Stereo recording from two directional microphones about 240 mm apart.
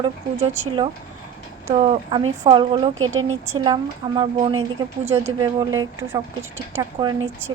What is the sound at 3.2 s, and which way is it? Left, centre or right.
Speech, right.